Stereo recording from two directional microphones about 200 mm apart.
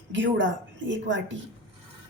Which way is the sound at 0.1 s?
70° right (ahead or behind).